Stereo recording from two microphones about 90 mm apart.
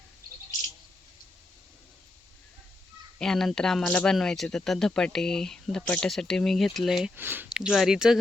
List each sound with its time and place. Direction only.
3.2 s speech: 5° left (ahead or behind)
7.2 s speech: 25° right (ahead or behind)
7.5 s speech: centre (ahead or behind)